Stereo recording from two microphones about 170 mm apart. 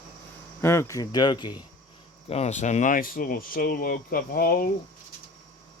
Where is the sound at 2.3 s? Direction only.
40° left (ahead or behind); by 4.5 s 60° left (ahead or behind).